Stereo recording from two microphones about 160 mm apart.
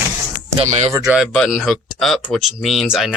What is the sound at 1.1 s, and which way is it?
Speech, centre (ahead or behind).